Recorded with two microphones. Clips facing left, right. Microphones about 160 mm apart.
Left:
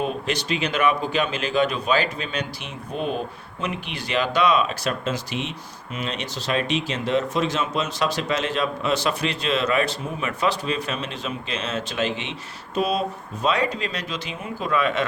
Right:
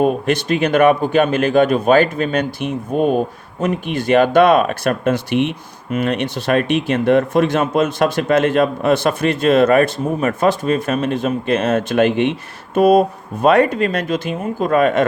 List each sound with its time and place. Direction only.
0.0 s a man's voice: 50° right (ahead or behind)